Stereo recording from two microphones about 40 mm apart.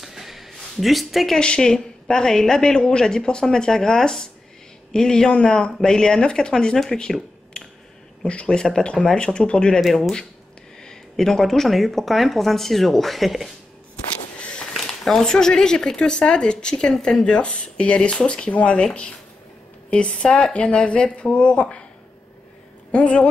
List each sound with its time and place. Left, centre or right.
0.0 s a sound: centre
1.4 s speech: left
5.3 s speech: left
5.7 s speech: centre
7.5 s a sound: left
8.2 s speech: left
9.8 s speech: centre
14.4 s a sound: left
14.7 s speech: centre; by 21.8 s left
22.8 s a woman's voice: left